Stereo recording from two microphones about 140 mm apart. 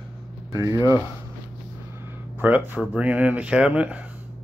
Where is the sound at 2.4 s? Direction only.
10° right (ahead or behind).